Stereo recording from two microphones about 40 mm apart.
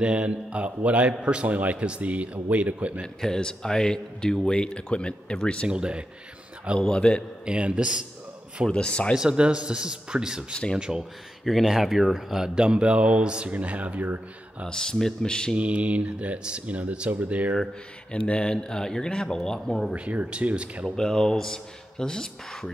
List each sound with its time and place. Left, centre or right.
0.0 s a man's voice: right
3.3 s speech: centre
5.7 s a man's voice: right
6.8 s speech: left
7.4 s a man's voice: right
8.6 s speech: left
9.1 s a man's voice: right
12.5 s a man's voice: right
14.7 s speech: centre
15.5 s a man's voice: right
18.1 s speech: left
19.9 s a man's voice: right
20.9 s speech: centre